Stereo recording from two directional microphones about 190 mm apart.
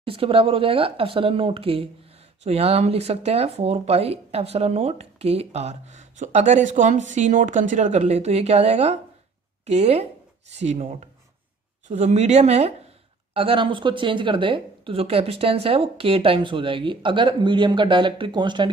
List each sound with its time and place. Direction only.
0.0 s speech: 30° right (ahead or behind)